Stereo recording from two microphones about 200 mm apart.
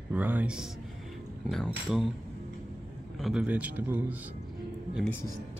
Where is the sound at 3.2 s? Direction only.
Centre (ahead or behind).